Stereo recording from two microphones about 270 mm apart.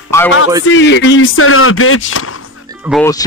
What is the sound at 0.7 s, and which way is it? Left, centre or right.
Speech, left.